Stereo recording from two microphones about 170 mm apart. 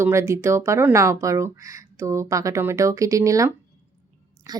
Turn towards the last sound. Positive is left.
turn(degrees=-20)  # may be behind; listen again after turning